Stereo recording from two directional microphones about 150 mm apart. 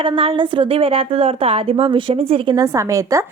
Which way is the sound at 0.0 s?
35° right (ahead or behind).